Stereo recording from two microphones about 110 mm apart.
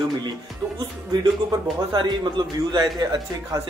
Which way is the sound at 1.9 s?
40° right (ahead or behind).